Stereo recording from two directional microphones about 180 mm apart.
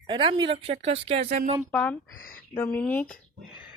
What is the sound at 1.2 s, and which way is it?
Speech, 55° right (ahead or behind).